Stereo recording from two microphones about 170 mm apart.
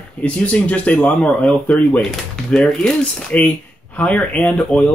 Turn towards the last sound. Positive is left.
turn(degrees=10)  # may be behind; listen again after turning